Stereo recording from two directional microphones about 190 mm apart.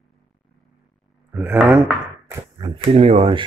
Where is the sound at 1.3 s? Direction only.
5° right (ahead or behind).